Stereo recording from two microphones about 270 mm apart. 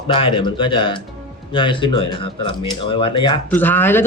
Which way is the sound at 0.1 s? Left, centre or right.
Centre.